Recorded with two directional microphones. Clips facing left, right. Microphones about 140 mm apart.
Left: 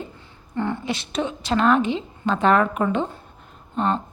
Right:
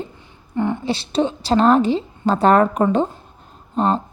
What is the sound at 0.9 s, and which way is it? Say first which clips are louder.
A woman's voice: right 6 dB; 30° right (ahead or behind).